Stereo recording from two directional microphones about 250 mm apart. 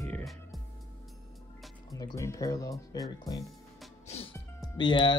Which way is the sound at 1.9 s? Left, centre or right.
Centre.